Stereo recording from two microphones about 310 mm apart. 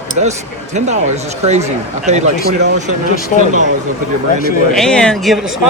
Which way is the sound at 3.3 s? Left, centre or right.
Left.